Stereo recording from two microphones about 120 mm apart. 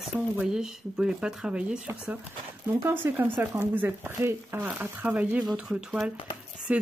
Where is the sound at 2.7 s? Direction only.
20° right (ahead or behind).